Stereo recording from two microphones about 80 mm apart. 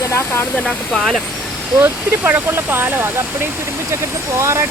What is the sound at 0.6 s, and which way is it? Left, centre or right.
Speech, centre.